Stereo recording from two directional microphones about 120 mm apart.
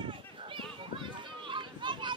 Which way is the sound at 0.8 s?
40° right (ahead or behind).